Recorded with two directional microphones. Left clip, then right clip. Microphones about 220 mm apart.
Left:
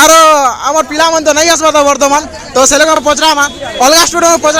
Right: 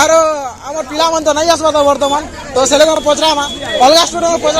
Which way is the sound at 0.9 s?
30° left (ahead or behind).